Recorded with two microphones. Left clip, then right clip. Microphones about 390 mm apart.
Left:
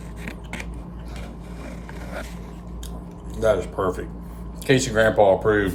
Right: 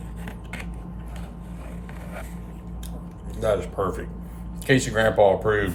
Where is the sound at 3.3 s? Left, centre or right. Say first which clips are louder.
Left 3 dB; centre.